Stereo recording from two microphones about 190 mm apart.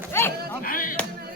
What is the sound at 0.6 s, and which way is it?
Music, 45° left (ahead or behind).